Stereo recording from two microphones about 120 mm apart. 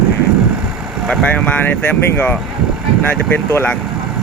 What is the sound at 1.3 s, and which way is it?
Speech, 15° left (ahead or behind).